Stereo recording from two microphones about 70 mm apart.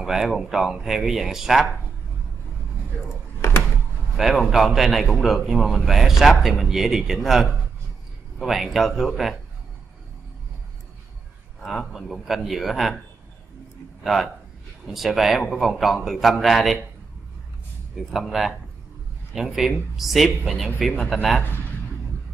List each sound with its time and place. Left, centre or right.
0.0 s a man's voice: centre
3.3 s a sound: left
4.2 s a man's voice: centre
11.6 s a man's voice: centre
14.0 s a man's voice: centre
18.1 s a man's voice: centre
20.9 s speech: centre